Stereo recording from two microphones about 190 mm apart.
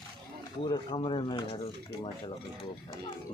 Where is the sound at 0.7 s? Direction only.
25° left (ahead or behind).